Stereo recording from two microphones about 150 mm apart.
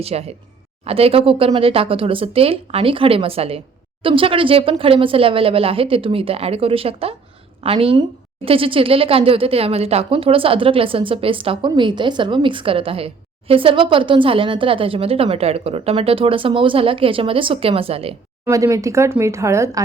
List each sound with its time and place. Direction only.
0.0 s speech: 45° right (ahead or behind)
18.4 s speech: 20° right (ahead or behind)